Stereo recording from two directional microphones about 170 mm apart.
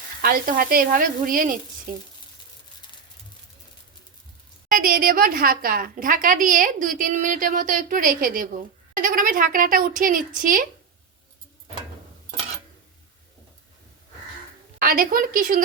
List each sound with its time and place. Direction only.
0.2 s speech: 60° right (ahead or behind)
4.7 s a woman's voice: 55° right (ahead or behind)
14.8 s speech: 60° right (ahead or behind)